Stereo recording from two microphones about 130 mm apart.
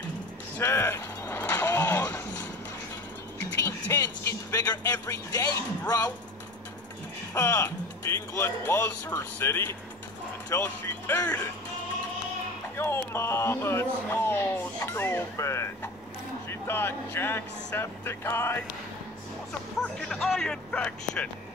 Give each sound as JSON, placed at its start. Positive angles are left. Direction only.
{"t": 0.6, "sound": "a sound", "side_deg": 20}
{"t": 5.4, "sound": "speech", "side_deg": 30}
{"t": 7.3, "sound": "speech", "side_deg": 20}
{"t": 12.7, "sound": "speech", "side_deg": 20}
{"t": 19.8, "sound": "speech", "side_deg": 5}